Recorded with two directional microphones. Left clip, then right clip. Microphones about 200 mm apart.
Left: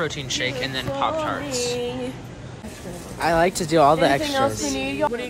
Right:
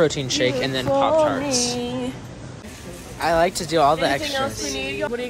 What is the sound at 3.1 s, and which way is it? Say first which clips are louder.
A woman's voice: even; 15° left (ahead or behind).